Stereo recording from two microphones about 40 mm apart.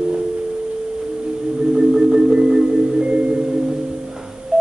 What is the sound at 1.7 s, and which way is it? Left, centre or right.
Music, centre.